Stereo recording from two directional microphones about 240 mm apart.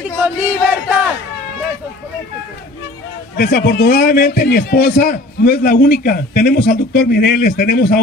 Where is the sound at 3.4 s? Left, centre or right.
Left.